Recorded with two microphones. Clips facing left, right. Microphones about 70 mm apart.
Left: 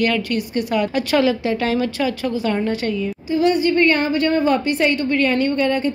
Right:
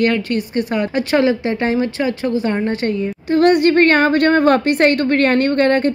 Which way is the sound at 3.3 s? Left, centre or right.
Right.